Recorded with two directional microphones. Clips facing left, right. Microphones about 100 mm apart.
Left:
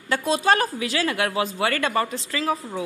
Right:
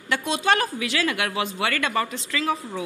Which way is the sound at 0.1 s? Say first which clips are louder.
Left 2 dB; 35° left (ahead or behind).